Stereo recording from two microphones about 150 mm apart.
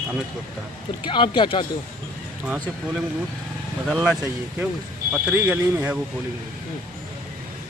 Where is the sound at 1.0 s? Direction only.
30° left (ahead or behind).